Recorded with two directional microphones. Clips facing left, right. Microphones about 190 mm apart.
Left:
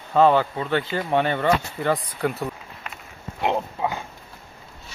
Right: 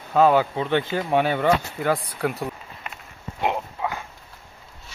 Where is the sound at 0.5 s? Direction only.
15° right (ahead or behind).